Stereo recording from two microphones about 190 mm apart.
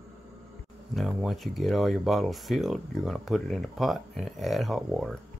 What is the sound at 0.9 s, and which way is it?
Speech, centre (ahead or behind).